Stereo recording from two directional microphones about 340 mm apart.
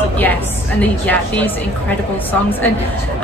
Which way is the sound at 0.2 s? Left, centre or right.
Centre.